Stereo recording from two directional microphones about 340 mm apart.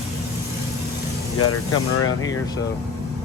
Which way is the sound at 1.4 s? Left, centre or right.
Left.